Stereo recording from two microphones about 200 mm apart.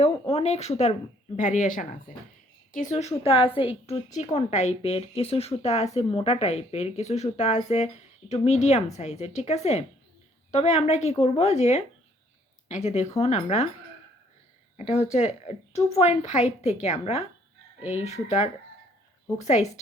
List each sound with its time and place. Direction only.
0.0 s a woman's voice: 30° left (ahead or behind)
14.9 s speech: 35° left (ahead or behind)